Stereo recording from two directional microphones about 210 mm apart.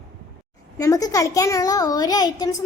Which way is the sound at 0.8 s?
15° left (ahead or behind).